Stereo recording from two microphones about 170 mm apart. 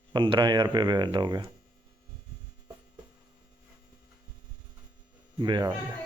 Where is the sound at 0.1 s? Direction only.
25° right (ahead or behind).